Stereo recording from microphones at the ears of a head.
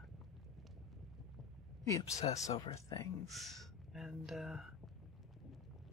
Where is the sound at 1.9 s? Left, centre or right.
Left.